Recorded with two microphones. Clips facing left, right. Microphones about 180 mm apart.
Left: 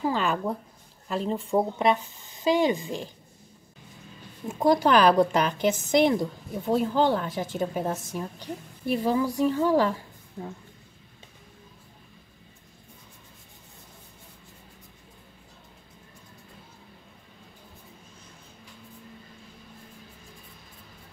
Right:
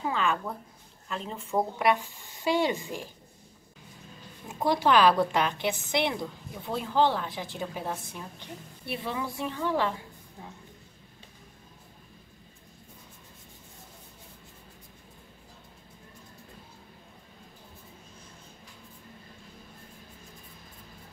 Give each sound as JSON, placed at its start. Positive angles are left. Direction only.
{"t": 0.0, "sound": "speech", "side_deg": 35}
{"t": 4.6, "sound": "a woman's voice", "side_deg": 45}